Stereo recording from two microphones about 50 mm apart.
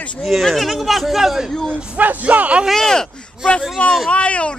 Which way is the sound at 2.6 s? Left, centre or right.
Centre.